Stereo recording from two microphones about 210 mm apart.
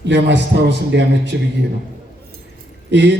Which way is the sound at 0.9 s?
55° right (ahead or behind).